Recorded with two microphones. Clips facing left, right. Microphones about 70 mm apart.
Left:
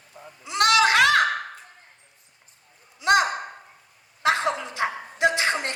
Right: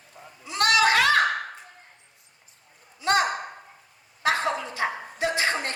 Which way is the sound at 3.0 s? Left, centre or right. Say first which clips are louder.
Left 3 dB; centre.